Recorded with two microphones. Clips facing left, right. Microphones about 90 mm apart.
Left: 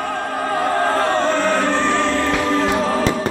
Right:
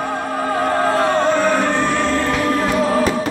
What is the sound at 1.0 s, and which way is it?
Music, 15° right (ahead or behind).